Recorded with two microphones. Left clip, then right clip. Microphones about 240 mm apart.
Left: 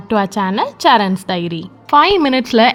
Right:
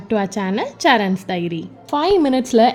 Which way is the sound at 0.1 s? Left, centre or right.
Centre.